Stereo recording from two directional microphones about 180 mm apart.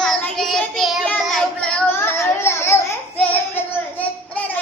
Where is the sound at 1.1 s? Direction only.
5° left (ahead or behind).